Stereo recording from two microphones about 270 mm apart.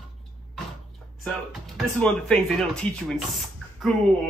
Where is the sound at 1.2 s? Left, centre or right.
Centre.